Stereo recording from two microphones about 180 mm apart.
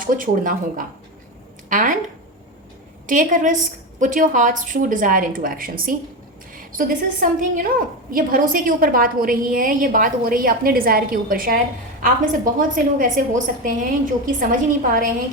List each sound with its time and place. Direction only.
0.0 s a woman's voice: 50° right (ahead or behind)
3.1 s a woman's voice: 45° right (ahead or behind)